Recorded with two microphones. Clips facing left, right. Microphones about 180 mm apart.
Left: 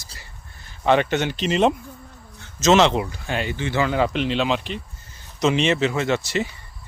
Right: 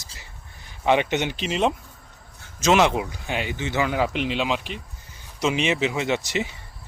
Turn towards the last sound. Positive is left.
turn(degrees=-15)  # may be behind; listen again after turning